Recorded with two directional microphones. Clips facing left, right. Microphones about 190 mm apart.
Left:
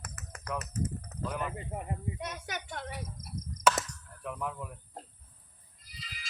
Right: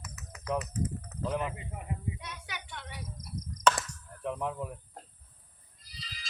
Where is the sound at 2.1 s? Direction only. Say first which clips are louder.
Left 5 dB; 45° left (ahead or behind).